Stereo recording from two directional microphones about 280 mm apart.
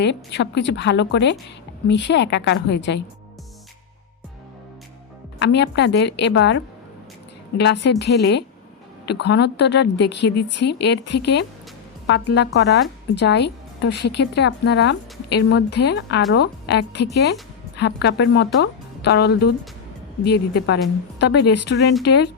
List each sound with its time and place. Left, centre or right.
0.0 s a woman's voice: left
5.4 s a woman's voice: left